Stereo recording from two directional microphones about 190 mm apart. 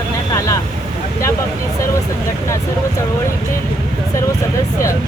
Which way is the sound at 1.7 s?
15° left (ahead or behind).